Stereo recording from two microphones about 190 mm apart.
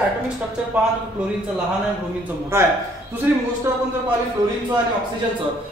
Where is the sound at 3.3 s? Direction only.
10° right (ahead or behind).